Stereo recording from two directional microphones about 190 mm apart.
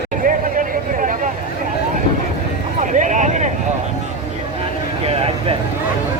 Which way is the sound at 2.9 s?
40° right (ahead or behind).